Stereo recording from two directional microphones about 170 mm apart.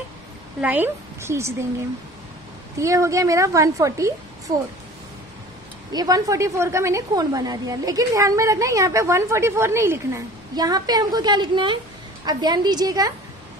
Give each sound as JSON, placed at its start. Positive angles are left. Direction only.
{"t": 0.6, "sound": "a woman's voice", "side_deg": -10}
{"t": 2.8, "sound": "a woman's voice", "side_deg": -20}
{"t": 5.9, "sound": "a woman's voice", "side_deg": -20}